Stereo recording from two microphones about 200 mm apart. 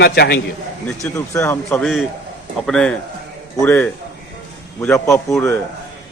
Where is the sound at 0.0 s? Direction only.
55° left (ahead or behind).